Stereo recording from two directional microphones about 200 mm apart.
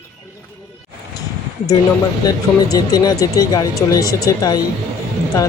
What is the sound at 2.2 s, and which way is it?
Speech, 20° left (ahead or behind).